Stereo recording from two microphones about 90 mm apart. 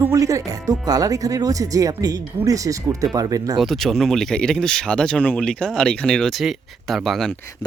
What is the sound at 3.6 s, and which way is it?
Speech, centre (ahead or behind).